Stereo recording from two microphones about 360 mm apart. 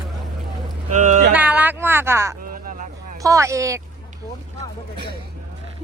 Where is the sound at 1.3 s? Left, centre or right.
Centre.